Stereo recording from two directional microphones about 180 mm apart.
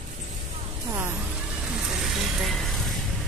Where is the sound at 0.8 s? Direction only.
15° right (ahead or behind).